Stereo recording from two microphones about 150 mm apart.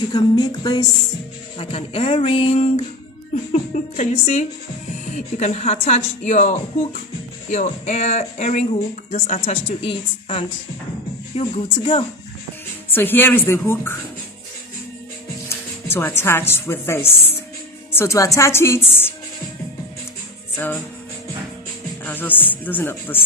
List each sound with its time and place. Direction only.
0.1 s a woman's voice: 30° left (ahead or behind)
12.9 s speech: 15° left (ahead or behind)
15.4 s speech: 15° left (ahead or behind)
22.0 s speech: 10° left (ahead or behind)